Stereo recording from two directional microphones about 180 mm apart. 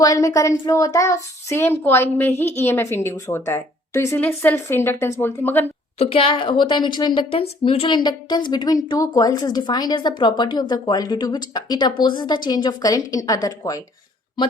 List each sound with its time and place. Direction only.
0.0 s a woman's voice: 20° left (ahead or behind)
6.0 s a woman's voice: 30° left (ahead or behind)